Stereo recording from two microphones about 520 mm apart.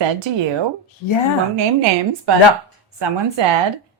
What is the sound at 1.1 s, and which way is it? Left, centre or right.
Speech, left.